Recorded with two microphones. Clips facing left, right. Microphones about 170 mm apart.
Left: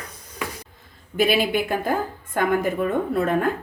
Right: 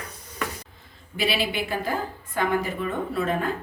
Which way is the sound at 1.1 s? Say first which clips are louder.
Left 6 dB; 50° left (ahead or behind).